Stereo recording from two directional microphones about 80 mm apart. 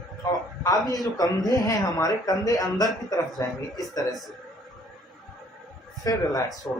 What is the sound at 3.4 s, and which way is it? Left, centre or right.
Speech, left.